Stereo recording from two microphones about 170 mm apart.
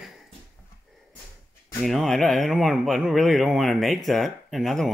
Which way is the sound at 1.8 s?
Centre (ahead or behind).